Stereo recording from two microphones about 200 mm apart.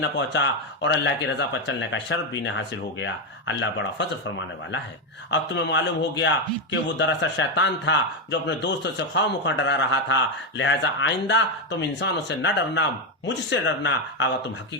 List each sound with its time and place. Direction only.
0.0 s a man's voice: 65° left (ahead or behind)
5.3 s a man's voice: 60° left (ahead or behind)